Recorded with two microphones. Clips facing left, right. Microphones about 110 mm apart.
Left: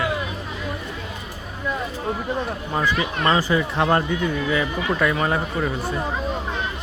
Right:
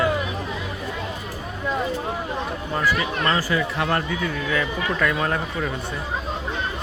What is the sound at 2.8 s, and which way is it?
Speech, 20° left (ahead or behind).